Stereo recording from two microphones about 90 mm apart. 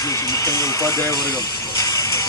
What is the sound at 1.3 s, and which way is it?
Music, 50° left (ahead or behind).